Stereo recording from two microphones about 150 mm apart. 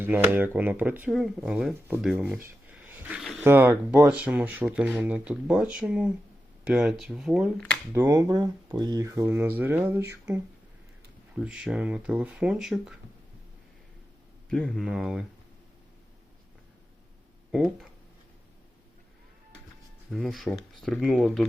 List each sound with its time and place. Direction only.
0.0 s speech: 15° right (ahead or behind)
2.4 s a sound: 10° right (ahead or behind)
3.4 s speech: 10° right (ahead or behind)
7.9 s speech: 20° right (ahead or behind)
11.3 s speech: 5° right (ahead or behind)
14.5 s speech: centre (ahead or behind)
17.5 s speech: 5° right (ahead or behind)
20.1 s speech: centre (ahead or behind)